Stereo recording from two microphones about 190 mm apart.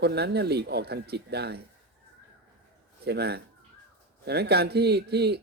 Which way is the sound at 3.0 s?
60° right (ahead or behind).